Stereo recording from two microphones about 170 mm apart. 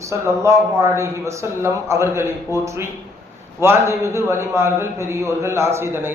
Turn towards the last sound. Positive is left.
turn(degrees=-15)  # may be behind; listen again after turning